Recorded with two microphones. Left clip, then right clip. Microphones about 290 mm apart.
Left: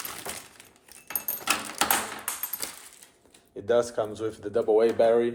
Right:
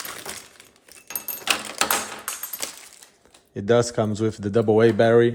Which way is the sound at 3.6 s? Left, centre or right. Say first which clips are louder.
Right 4 dB; right.